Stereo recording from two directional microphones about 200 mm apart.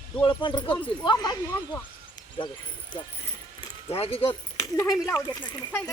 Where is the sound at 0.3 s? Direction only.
25° left (ahead or behind).